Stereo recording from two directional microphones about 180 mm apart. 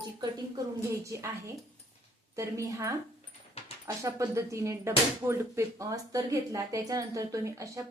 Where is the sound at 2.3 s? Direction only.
15° right (ahead or behind).